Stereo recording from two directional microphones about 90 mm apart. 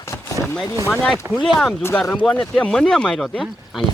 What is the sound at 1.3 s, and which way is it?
Speech, 5° left (ahead or behind).